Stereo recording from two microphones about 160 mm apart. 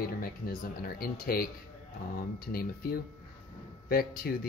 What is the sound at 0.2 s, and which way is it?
Speech, 70° left (ahead or behind).